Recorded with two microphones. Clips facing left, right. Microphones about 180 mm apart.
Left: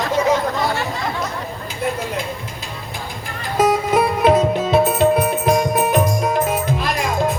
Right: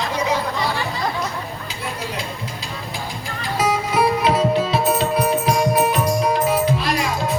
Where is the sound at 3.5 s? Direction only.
50° left (ahead or behind).